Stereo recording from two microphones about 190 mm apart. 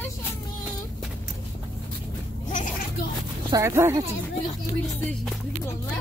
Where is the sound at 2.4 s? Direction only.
40° left (ahead or behind).